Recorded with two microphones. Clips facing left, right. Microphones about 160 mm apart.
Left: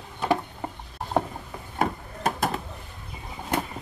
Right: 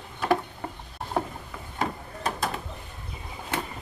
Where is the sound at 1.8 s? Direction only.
50° left (ahead or behind).